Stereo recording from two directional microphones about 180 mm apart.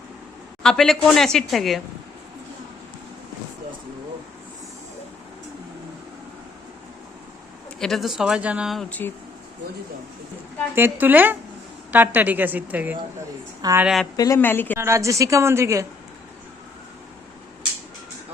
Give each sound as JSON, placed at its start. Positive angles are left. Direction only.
{"t": 0.6, "sound": "speech", "side_deg": 5}
{"t": 7.8, "sound": "speech", "side_deg": 0}
{"t": 10.8, "sound": "a woman's voice", "side_deg": -10}
{"t": 13.8, "sound": "speech", "side_deg": 0}
{"t": 14.2, "sound": "speech", "side_deg": 15}
{"t": 14.8, "sound": "a woman's voice", "side_deg": -15}